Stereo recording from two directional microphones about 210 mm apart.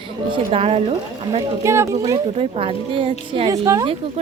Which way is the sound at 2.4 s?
25° right (ahead or behind).